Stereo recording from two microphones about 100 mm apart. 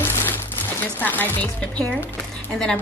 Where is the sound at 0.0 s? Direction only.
20° left (ahead or behind).